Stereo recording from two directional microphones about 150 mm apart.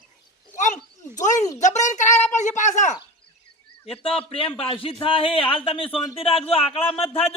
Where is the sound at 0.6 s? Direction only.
55° left (ahead or behind).